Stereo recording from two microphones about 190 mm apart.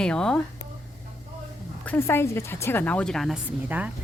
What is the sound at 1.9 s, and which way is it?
A woman's voice, 10° left (ahead or behind).